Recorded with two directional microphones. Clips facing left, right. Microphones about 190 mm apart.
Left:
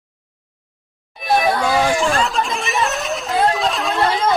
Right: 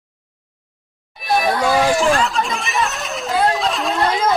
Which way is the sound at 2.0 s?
Centre (ahead or behind).